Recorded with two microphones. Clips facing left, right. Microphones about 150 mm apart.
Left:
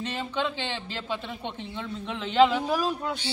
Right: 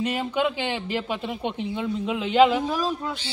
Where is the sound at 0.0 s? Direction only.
10° right (ahead or behind).